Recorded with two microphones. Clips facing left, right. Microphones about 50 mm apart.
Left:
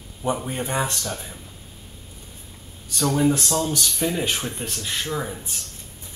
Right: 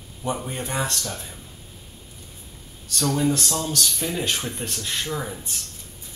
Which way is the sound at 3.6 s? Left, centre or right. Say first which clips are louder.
Left 2 dB; centre.